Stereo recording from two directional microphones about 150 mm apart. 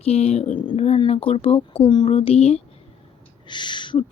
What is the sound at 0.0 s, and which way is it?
Speech, 45° left (ahead or behind).